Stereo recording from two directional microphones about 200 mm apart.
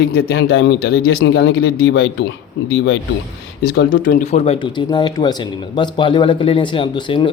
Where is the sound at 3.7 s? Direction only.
45° left (ahead or behind).